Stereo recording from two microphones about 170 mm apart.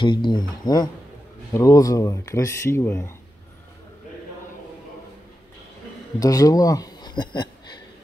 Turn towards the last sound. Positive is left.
turn(degrees=25)  # may be behind; listen again after turning